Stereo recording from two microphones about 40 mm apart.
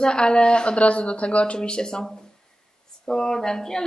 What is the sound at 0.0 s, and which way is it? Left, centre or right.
A woman's voice, left.